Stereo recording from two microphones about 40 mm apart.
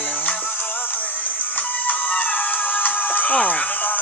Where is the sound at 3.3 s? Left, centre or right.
Left.